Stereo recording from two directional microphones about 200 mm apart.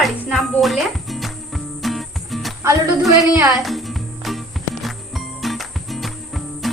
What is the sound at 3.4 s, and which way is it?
Speech, 15° right (ahead or behind).